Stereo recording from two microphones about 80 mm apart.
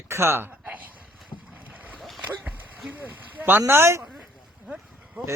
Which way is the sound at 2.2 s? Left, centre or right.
Centre.